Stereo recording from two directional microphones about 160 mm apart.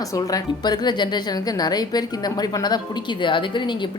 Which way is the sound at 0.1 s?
20° left (ahead or behind).